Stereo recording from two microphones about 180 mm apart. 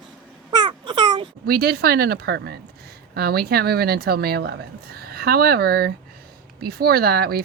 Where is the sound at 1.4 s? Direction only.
60° right (ahead or behind).